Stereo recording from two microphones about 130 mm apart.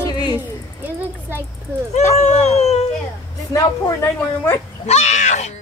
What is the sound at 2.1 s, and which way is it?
Speech, 55° left (ahead or behind).